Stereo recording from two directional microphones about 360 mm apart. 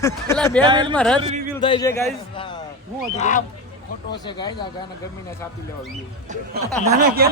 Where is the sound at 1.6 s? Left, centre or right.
Centre.